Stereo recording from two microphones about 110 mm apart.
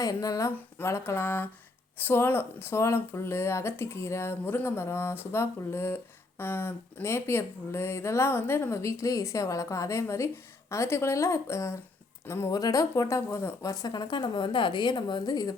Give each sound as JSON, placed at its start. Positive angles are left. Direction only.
{"t": 0.0, "sound": "speech", "side_deg": 35}